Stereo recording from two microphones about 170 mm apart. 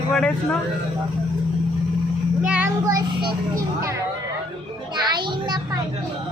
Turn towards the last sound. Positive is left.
turn(degrees=-25)  # may be behind; listen again after turning